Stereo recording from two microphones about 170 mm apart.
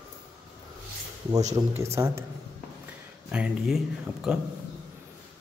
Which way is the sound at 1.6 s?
20° right (ahead or behind).